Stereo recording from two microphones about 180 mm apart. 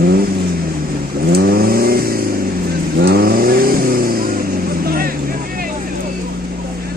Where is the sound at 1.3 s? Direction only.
60° right (ahead or behind).